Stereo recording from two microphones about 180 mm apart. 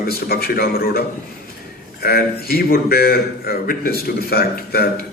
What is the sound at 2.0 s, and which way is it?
A man's voice, 55° left (ahead or behind).